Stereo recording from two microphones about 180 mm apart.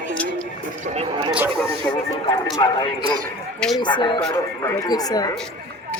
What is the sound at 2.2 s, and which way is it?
Speech, 25° left (ahead or behind).